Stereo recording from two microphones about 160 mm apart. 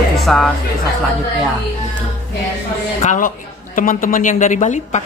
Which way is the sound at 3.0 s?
50° left (ahead or behind).